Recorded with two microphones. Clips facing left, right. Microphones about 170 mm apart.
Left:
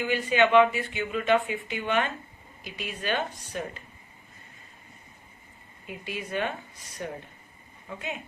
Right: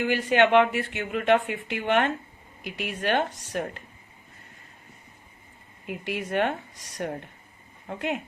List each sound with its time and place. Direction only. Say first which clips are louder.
0.0 s a woman's voice: right 2 dB; 80° right
5.8 s a woman's voice: right 5 dB; 70° right (ahead or behind)